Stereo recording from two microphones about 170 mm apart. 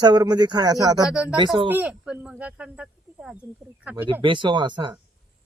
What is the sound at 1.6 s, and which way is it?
Speech, 10° right (ahead or behind).